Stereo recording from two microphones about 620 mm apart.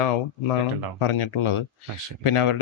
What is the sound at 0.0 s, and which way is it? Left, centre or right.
Speech, left.